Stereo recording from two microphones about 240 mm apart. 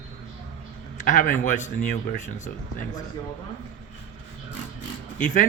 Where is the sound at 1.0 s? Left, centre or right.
Left.